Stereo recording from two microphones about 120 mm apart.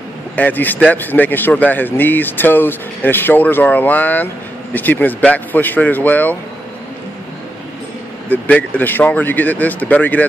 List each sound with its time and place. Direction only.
0.4 s speech: 15° left (ahead or behind)
8.3 s speech: 15° left (ahead or behind)